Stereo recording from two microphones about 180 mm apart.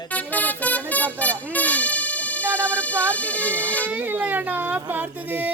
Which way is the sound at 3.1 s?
10° left (ahead or behind).